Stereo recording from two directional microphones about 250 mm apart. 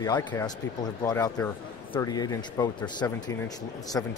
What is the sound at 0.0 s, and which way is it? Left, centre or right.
A man's voice, centre.